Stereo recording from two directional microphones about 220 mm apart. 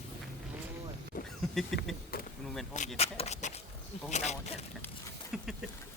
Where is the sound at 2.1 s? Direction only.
45° left (ahead or behind).